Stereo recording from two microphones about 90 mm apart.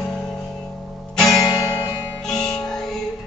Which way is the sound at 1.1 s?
5° left (ahead or behind).